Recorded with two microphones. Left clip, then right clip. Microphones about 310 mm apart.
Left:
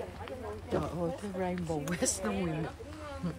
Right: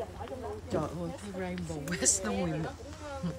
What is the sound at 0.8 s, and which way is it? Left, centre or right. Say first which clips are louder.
A woman's voice: left 2 dB; centre.